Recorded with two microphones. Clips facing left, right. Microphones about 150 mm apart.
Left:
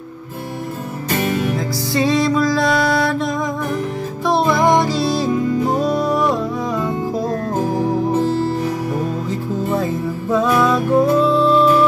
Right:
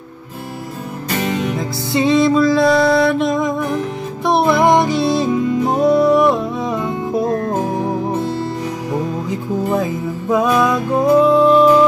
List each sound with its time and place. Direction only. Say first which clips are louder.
1.9 s music: right 3 dB; 20° right (ahead or behind)
5.9 s music: right 6 dB; 65° right (ahead or behind)
6.2 s music: right 3 dB; 20° right (ahead or behind)
10.3 s music: right 1 dB; 15° right (ahead or behind)